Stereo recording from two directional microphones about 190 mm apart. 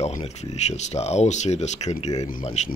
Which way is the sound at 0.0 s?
35° left (ahead or behind).